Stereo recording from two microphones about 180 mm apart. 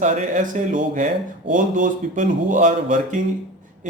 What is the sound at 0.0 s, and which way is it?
Speech, 45° right (ahead or behind).